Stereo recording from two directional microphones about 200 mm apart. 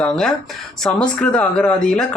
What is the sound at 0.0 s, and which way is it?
Speech, 5° left (ahead or behind).